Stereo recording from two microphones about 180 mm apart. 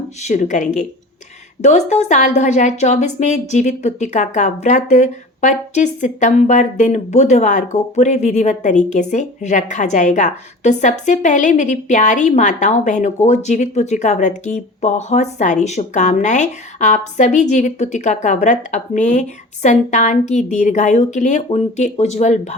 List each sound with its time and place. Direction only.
0.2 s a woman's voice: 40° left (ahead or behind)